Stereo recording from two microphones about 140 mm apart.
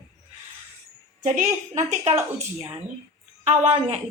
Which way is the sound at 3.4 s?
50° right (ahead or behind).